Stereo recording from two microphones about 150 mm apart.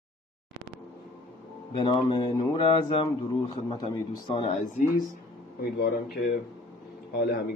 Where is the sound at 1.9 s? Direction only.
30° left (ahead or behind).